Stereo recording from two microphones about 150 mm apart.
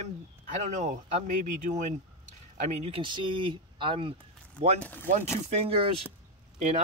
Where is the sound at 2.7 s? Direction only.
40° right (ahead or behind).